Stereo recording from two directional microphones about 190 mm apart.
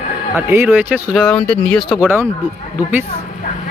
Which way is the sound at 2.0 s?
10° right (ahead or behind).